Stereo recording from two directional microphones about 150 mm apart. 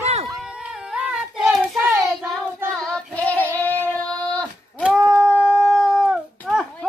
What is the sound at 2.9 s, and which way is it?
Child singing, 5° left (ahead or behind).